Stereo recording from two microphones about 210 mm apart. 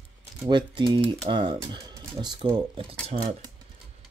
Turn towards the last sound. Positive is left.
turn(degrees=-25)  # may be behind; listen again after turning